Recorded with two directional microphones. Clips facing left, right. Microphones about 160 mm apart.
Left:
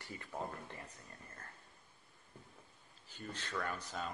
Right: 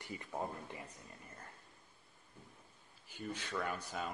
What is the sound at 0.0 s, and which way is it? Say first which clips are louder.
Speech: right 2 dB; 20° right (ahead or behind).